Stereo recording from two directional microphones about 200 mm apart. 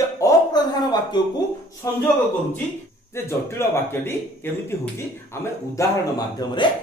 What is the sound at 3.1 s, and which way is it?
Speech, 15° left (ahead or behind).